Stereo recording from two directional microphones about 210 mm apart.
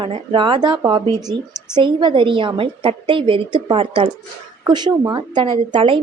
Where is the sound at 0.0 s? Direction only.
25° right (ahead or behind).